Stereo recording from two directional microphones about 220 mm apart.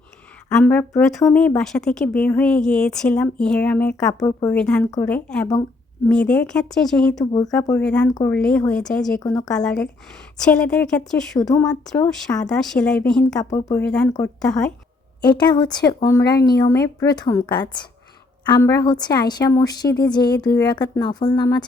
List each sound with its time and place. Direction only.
0.5 s speech: 5° left (ahead or behind)
4.2 s speech: 15° left (ahead or behind)
4.5 s speech: 5° left (ahead or behind)
9.2 s speech: 15° left (ahead or behind)
9.5 s speech: 5° left (ahead or behind)
13.4 s speech: 15° left (ahead or behind)
13.8 s speech: 5° left (ahead or behind)
15.3 s speech: 20° left (ahead or behind)